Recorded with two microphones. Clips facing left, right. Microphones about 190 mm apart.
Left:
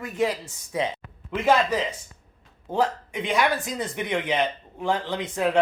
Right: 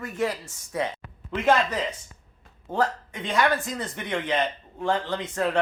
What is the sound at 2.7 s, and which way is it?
Speech, 15° left (ahead or behind).